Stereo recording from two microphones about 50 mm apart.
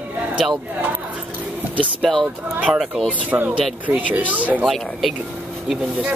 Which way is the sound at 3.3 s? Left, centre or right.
Right.